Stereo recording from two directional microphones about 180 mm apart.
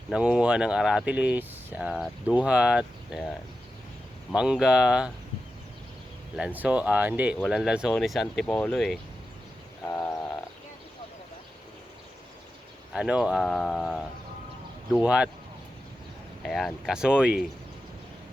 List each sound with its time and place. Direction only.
0.1 s speech: 5° right (ahead or behind)
4.4 s speech: 5° right (ahead or behind)
6.3 s speech: 5° right (ahead or behind)
9.8 s wild animals: 15° left (ahead or behind)
12.9 s speech: 5° right (ahead or behind)
16.4 s speech: 5° left (ahead or behind)